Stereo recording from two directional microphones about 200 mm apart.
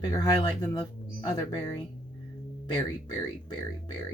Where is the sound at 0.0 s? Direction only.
20° left (ahead or behind).